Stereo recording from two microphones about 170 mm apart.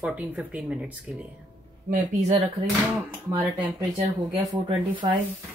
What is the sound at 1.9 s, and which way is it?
Speech, 40° right (ahead or behind).